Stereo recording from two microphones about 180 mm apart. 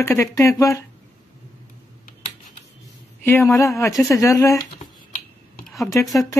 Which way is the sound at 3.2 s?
10° left (ahead or behind).